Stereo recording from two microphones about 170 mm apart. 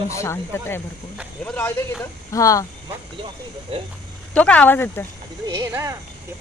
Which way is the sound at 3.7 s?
35° right (ahead or behind).